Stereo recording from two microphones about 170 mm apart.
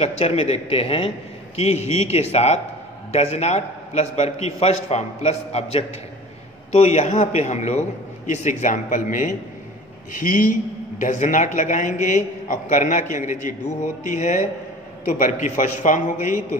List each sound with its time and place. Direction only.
0.0 s a man's voice: 35° left (ahead or behind)